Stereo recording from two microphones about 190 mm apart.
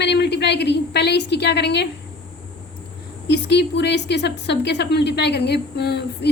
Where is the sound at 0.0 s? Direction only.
65° left (ahead or behind).